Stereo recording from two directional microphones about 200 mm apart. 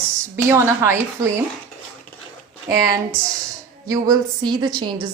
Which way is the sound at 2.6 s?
15° right (ahead or behind).